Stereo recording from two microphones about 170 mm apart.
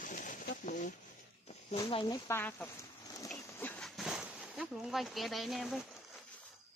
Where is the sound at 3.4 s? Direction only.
10° left (ahead or behind).